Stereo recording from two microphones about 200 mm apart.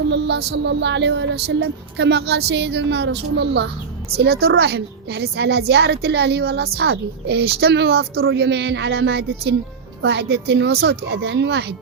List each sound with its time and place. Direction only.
0.1 s a woman's voice: 60° right (ahead or behind)
8.2 s a woman's voice: 65° right (ahead or behind)